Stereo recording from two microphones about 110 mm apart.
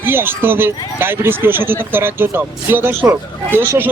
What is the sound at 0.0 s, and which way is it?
Speech, 20° right (ahead or behind).